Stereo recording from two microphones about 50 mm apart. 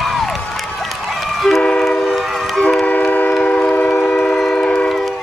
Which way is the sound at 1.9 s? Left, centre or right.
Centre.